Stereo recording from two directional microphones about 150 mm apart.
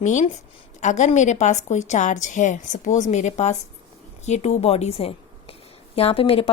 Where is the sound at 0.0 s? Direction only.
55° left (ahead or behind).